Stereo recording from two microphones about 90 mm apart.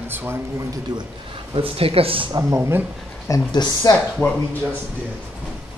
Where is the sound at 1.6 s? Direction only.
90° right.